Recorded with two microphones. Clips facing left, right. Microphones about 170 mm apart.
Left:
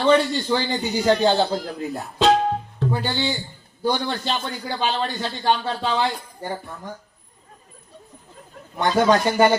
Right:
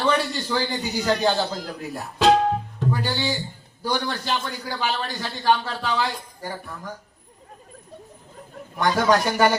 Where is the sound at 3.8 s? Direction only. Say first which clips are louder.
Left 3 dB; 20° left (ahead or behind).